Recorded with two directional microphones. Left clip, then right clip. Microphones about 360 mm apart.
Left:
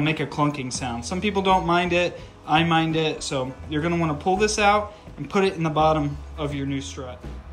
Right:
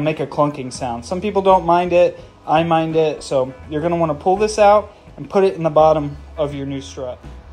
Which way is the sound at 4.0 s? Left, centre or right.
Centre.